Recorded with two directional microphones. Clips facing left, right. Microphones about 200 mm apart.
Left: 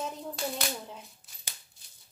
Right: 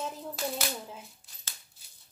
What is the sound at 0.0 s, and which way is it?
Coin, centre (ahead or behind).